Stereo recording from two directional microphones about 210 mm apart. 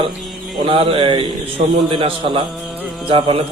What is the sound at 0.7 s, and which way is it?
A man's voice, 25° right (ahead or behind).